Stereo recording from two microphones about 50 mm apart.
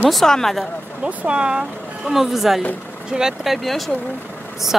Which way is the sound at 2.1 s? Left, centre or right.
Centre.